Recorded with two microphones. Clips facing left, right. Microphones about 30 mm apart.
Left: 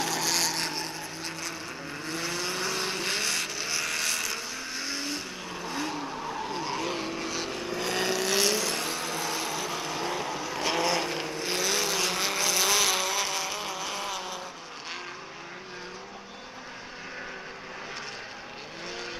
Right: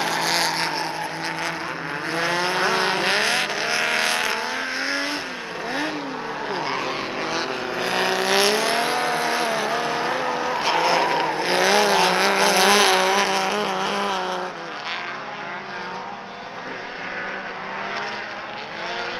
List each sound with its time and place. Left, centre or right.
0.0 s vehicle: right